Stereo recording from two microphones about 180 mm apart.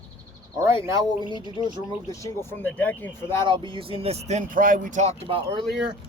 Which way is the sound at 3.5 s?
30° right (ahead or behind).